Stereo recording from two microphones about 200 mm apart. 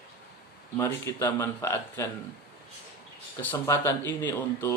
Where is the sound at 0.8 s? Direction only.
10° left (ahead or behind).